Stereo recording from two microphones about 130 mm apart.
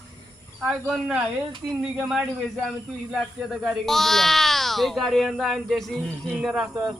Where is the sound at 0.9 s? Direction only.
5° right (ahead or behind).